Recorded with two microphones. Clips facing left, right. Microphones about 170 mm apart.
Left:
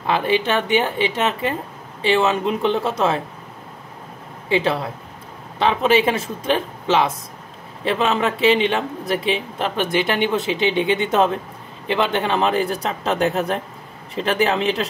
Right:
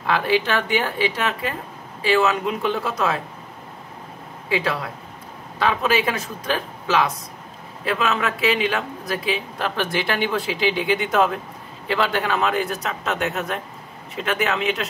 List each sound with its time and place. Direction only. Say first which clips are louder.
0.0 s speech: left 1 dB; 20° left (ahead or behind)
4.5 s a man's voice: left 4 dB; 25° left (ahead or behind)